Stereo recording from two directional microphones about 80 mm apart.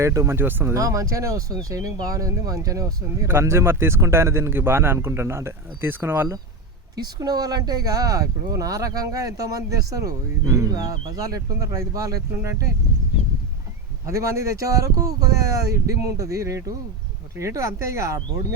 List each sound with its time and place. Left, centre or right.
0.0 s speech: right
0.7 s speech: right
3.2 s speech: right
6.9 s speech: right
12.3 s speech: right
14.1 s speech: right